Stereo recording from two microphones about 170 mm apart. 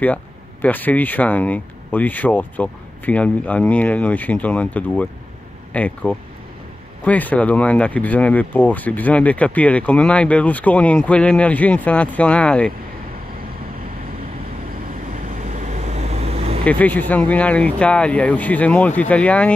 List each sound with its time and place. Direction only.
0.0 s speech: 10° left (ahead or behind)
15.2 s vehicle: 50° right (ahead or behind)
16.6 s speech: 10° left (ahead or behind)